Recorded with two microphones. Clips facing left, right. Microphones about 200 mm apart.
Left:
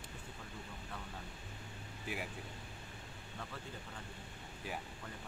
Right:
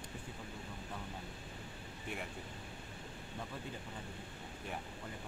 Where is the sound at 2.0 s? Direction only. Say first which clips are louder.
Left 1 dB; 5° left (ahead or behind).